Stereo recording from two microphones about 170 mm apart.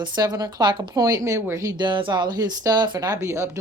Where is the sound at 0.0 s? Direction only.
25° right (ahead or behind).